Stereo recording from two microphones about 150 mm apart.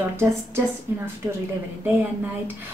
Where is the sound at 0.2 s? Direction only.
15° right (ahead or behind).